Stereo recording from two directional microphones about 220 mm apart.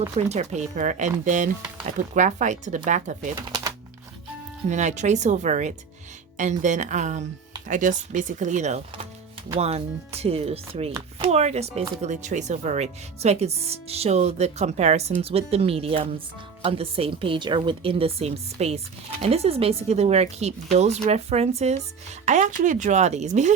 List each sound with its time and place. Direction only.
0.3 s speech: 30° right (ahead or behind)
3.4 s typewriter: 15° right (ahead or behind)
4.7 s speech: 30° right (ahead or behind)